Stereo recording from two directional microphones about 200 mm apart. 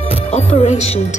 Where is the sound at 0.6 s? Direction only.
30° left (ahead or behind).